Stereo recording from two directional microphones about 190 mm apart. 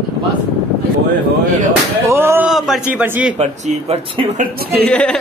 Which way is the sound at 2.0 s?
15° right (ahead or behind).